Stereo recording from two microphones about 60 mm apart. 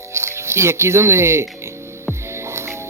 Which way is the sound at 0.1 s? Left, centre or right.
Right.